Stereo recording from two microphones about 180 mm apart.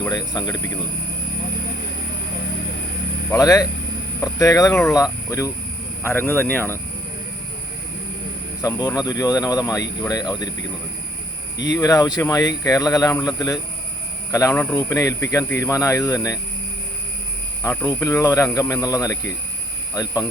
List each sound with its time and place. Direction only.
0.0 s speech: 20° left (ahead or behind)
3.3 s speech: 20° left (ahead or behind)
6.0 s speech: 15° left (ahead or behind)
8.6 s speech: 20° left (ahead or behind)
11.5 s speech: 80° left
11.8 s speech: 20° left (ahead or behind)
17.6 s speech: 15° left (ahead or behind)